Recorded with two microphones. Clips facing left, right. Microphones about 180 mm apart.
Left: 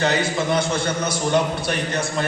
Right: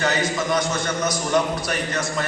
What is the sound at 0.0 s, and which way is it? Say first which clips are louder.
A man's voice: left 2 dB; 30° left (ahead or behind).